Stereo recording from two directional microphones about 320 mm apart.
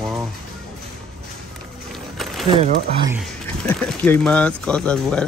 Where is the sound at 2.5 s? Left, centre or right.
Centre.